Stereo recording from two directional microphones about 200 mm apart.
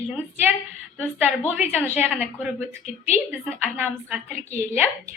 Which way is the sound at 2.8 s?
35° left (ahead or behind).